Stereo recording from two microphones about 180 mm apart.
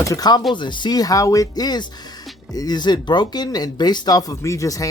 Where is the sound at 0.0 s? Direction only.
20° left (ahead or behind).